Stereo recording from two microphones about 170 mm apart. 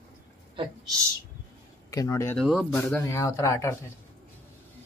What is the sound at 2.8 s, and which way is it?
Speech, 10° left (ahead or behind).